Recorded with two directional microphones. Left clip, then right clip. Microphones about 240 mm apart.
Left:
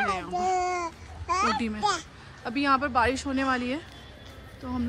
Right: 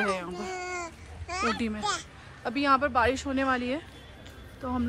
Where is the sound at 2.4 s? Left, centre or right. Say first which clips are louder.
Even; centre.